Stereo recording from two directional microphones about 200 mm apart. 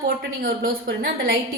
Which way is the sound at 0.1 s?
45° right (ahead or behind).